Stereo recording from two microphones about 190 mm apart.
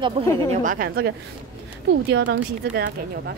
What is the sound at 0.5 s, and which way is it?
Speech, 45° right (ahead or behind).